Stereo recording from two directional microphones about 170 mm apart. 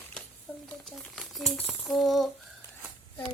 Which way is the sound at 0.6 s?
Centre (ahead or behind).